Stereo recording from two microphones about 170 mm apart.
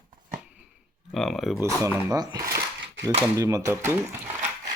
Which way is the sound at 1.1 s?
Centre (ahead or behind).